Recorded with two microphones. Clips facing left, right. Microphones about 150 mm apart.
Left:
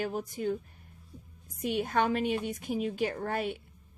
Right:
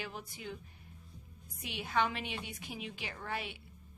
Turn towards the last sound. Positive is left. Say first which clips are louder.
# left 9 dB
turn(degrees=45)  # may be behind; listen again after turning